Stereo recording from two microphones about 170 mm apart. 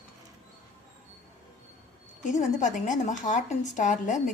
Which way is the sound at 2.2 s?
45° left (ahead or behind).